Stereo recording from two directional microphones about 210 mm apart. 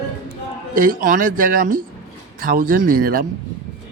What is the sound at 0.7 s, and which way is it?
Speech, 40° right (ahead or behind).